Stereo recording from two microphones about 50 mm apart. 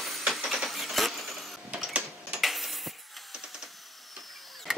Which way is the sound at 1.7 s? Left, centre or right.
Right.